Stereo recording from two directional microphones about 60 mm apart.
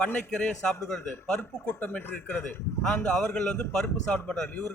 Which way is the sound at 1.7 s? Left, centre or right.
Left.